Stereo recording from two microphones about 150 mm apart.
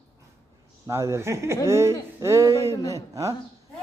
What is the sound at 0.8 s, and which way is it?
A man's voice, 20° right (ahead or behind).